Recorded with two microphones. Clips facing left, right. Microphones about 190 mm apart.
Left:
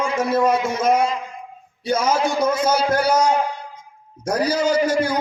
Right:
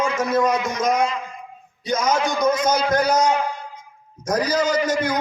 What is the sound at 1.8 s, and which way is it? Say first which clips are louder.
A man's voice: left 1 dB; 10° left (ahead or behind).